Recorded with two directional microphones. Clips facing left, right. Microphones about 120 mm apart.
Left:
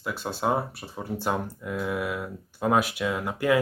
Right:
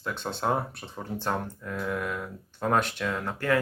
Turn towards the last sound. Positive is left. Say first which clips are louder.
# left 3 dB
turn(degrees=10)  # may be behind; listen again after turning